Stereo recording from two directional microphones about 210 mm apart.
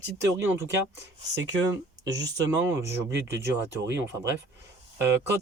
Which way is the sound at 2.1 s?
15° right (ahead or behind).